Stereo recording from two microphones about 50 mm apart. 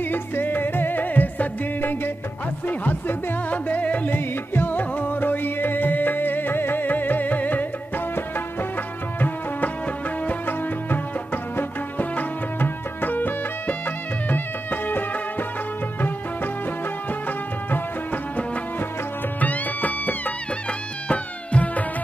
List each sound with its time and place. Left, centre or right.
0.0 s music: left
4.1 s music: left
10.2 s music: left
17.6 s music: left